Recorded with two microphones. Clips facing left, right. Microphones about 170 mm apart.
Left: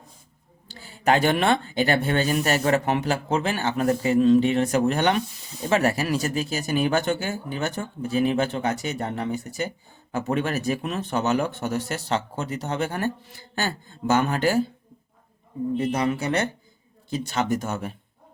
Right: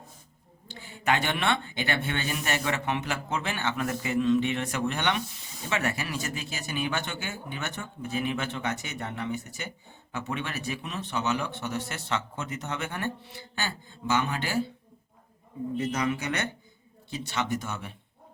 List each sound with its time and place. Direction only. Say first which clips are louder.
0.7 s speech: left 6 dB; 40° left (ahead or behind)
15.8 s speech: left 4 dB; 30° left (ahead or behind)